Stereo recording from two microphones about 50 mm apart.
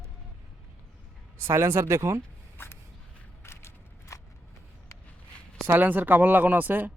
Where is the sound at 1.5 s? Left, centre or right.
Right.